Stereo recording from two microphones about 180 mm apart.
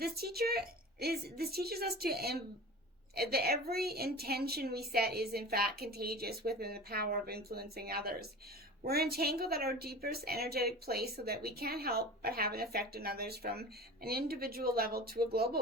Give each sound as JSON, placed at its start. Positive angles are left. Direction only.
{"t": 0.0, "sound": "a woman's voice", "side_deg": -60}